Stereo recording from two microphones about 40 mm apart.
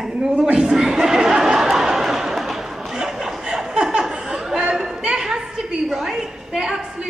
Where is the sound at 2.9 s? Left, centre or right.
Centre.